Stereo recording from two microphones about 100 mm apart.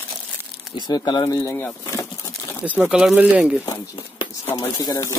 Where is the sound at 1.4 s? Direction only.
30° left (ahead or behind).